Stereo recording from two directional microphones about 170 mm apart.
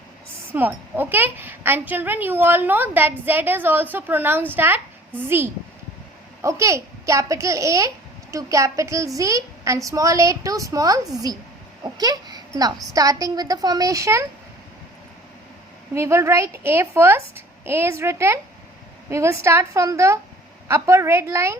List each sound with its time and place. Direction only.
0.5 s a woman's voice: 10° right (ahead or behind)
16.0 s a woman's voice: 15° right (ahead or behind)